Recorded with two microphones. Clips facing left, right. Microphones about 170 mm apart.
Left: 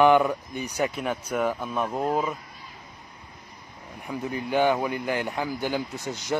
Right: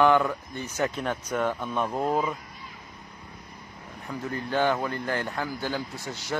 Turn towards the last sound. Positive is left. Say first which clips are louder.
# left 4 dB
turn(degrees=20)  # may be behind; listen again after turning